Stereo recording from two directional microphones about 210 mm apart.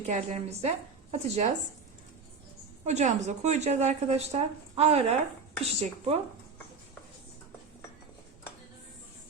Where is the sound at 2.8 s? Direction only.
35° right (ahead or behind).